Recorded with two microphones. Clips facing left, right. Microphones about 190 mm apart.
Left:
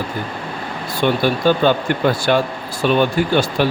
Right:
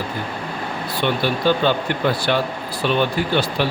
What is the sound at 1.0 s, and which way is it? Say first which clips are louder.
Speech: left 4 dB; 45° left (ahead or behind).